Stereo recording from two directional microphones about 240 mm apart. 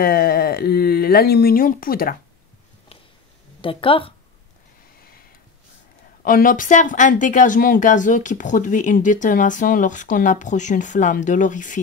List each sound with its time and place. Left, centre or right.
0.0 s speech: left
3.6 s speech: left
6.2 s speech: left